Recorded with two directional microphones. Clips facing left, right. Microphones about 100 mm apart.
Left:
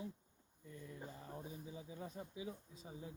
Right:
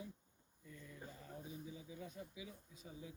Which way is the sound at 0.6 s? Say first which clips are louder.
Left 3 dB; 25° left (ahead or behind).